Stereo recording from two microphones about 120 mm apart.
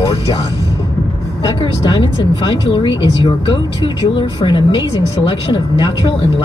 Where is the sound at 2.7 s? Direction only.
45° left (ahead or behind).